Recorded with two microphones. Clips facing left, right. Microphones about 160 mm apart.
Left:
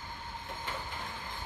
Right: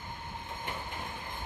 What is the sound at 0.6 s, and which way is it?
Train, 15° right (ahead or behind).